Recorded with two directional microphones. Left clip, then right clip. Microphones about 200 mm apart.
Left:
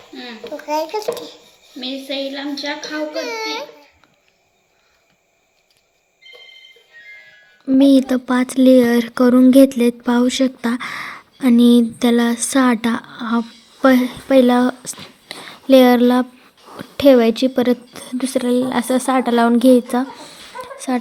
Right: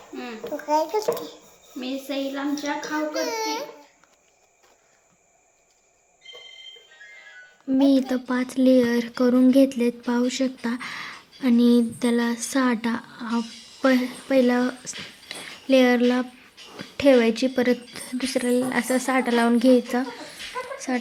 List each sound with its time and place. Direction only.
0.2 s a child's voice: centre (ahead or behind)
2.0 s a woman's voice: 20° right (ahead or behind)
3.1 s a child's voice: centre (ahead or behind)
7.7 s a woman's voice: 25° left (ahead or behind)